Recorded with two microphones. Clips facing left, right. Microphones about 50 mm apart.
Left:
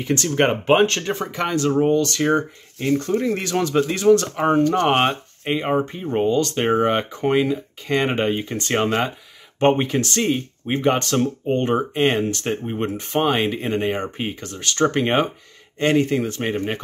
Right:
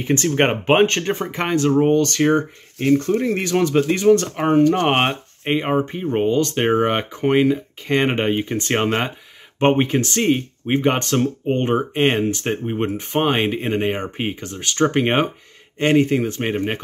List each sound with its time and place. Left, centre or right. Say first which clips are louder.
0.0 s speech: right 1 dB; right
12.2 s speech: right 2 dB; centre